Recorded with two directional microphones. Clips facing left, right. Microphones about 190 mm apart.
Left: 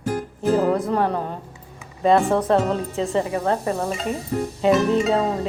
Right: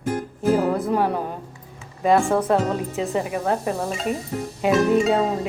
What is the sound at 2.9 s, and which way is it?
A woman's voice, 15° right (ahead or behind).